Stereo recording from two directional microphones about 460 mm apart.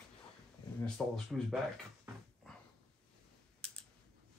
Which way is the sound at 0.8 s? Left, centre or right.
Centre.